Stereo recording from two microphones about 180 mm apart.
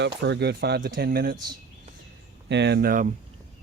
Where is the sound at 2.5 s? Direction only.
70° right (ahead or behind); by 3.1 s 55° right (ahead or behind).